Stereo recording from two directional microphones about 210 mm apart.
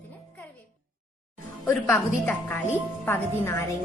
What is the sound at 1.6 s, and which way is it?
A woman's voice, 10° left (ahead or behind).